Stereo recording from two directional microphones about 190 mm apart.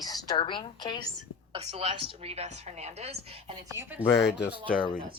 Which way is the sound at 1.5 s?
30° right (ahead or behind).